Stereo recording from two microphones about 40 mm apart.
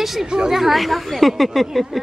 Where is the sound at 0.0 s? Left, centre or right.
Centre.